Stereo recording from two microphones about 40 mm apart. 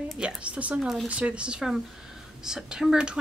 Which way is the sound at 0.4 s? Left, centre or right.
Right.